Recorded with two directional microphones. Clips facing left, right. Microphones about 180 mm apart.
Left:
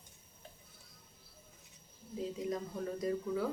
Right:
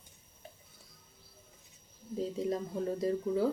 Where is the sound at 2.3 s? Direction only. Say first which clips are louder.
Right 5 dB; 30° right (ahead or behind).